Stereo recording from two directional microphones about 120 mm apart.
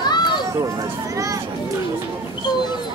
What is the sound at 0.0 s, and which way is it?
Run, 35° left (ahead or behind).